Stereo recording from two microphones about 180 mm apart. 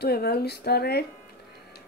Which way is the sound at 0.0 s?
60° left (ahead or behind).